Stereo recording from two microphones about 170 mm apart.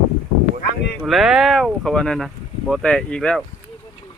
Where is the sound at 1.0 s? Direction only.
Centre (ahead or behind).